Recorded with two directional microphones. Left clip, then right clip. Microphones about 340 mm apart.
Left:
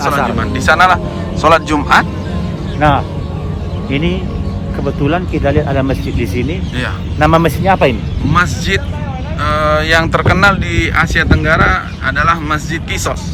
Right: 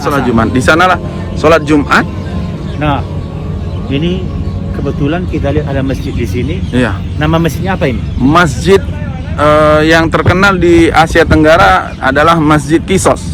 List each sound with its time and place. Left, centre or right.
0.3 s a man's voice: centre
2.8 s speech: left
6.7 s a man's voice: centre
7.2 s speech: left
8.3 s a man's voice: centre